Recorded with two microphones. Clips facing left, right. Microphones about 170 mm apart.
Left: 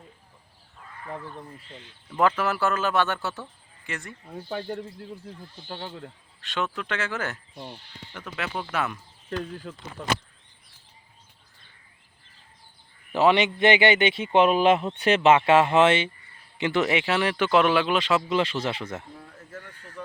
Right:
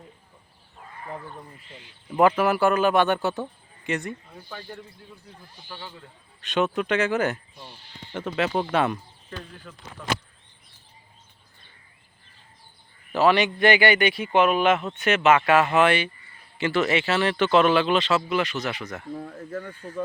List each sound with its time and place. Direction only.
2.1 s speech: 10° right (ahead or behind)
4.4 s speech: 50° left (ahead or behind)
6.4 s speech: 20° right (ahead or behind)
13.1 s speech: 20° left (ahead or behind)
18.3 s speech: 25° left (ahead or behind)
19.1 s speech: 50° right (ahead or behind)